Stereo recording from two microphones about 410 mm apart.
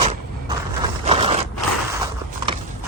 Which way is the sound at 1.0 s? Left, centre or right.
Centre.